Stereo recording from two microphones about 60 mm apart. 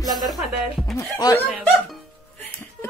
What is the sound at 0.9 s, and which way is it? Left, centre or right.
Music, left.